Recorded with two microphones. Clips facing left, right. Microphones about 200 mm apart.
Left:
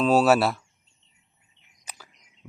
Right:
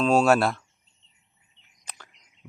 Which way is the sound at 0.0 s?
5° left (ahead or behind).